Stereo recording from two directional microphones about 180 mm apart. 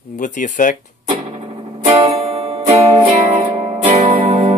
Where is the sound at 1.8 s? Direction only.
30° right (ahead or behind).